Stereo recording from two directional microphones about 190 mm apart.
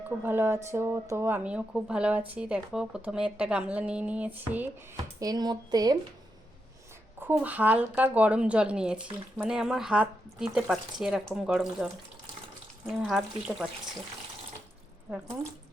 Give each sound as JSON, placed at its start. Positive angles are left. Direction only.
{"t": 0.2, "sound": "speech", "side_deg": -10}
{"t": 5.2, "sound": "speech", "side_deg": -20}
{"t": 7.2, "sound": "speech", "side_deg": -10}